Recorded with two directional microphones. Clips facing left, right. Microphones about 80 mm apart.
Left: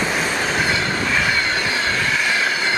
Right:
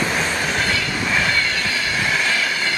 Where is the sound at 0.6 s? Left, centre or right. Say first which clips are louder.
Left 2 dB; left.